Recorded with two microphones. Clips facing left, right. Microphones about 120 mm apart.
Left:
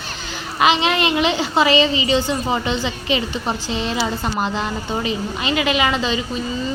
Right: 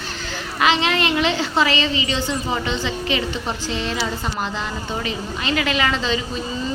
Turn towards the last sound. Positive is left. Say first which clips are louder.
# left 2 dB
turn(degrees=10)  # may be behind; listen again after turning